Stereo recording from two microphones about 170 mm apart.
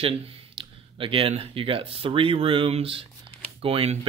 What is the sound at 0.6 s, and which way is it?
Speech, 30° right (ahead or behind).